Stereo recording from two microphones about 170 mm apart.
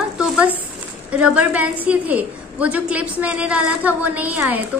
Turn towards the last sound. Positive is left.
turn(degrees=-10)  # may be behind; listen again after turning